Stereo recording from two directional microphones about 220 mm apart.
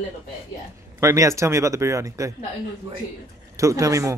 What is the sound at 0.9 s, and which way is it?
A man's voice, 15° right (ahead or behind).